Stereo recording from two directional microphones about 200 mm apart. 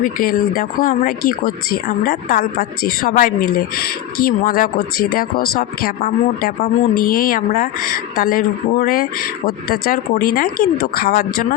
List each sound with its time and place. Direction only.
0.0 s speech: 45° left (ahead or behind)